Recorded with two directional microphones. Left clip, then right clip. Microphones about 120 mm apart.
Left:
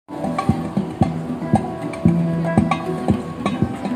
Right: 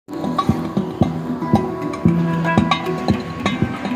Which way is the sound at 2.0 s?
5° left (ahead or behind).